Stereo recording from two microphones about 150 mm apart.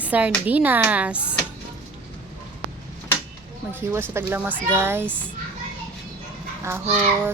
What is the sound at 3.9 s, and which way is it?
Speech, 15° right (ahead or behind).